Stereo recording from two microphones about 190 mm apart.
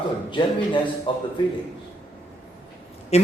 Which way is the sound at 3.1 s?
35° left (ahead or behind).